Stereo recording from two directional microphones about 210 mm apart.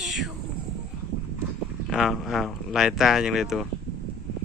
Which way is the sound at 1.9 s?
Centre (ahead or behind).